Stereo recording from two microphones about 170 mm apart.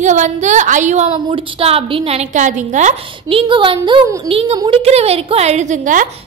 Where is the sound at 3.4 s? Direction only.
30° right (ahead or behind); by 6.0 s 45° right (ahead or behind).